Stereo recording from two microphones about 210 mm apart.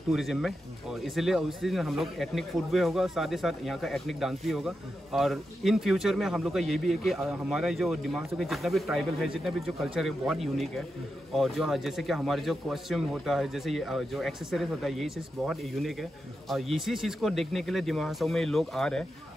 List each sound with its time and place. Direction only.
0.1 s speech: centre (ahead or behind)